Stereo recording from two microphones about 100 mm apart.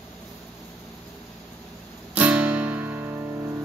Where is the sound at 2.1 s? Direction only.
15° right (ahead or behind).